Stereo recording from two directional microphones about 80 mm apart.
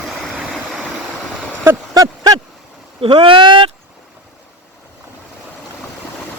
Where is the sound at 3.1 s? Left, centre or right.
Right.